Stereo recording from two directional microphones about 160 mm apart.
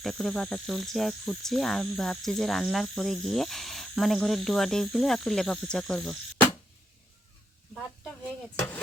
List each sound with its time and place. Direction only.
0.0 s cricket: centre (ahead or behind)